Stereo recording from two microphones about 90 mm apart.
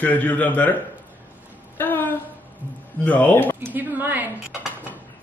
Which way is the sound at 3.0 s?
20° left (ahead or behind).